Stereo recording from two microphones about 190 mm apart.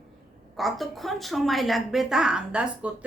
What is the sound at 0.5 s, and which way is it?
A woman's voice, centre (ahead or behind).